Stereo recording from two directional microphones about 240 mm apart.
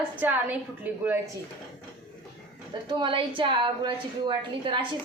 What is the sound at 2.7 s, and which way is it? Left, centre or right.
A woman's voice, centre.